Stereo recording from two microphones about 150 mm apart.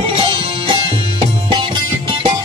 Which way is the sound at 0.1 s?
30° right (ahead or behind).